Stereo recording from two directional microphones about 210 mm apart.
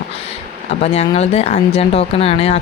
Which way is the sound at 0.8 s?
30° left (ahead or behind).